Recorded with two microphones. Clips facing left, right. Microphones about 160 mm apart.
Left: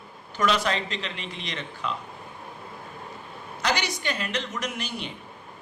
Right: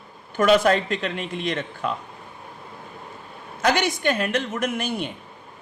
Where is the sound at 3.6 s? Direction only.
50° right (ahead or behind).